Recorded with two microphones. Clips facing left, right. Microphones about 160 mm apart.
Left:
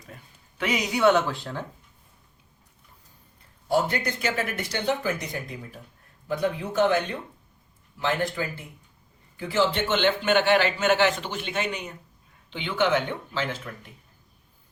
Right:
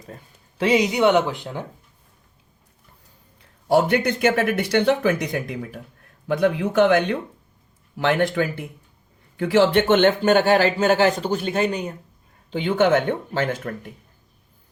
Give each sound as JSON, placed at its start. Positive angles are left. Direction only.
{"t": 0.6, "sound": "speech", "side_deg": -25}
{"t": 3.7, "sound": "speech", "side_deg": -70}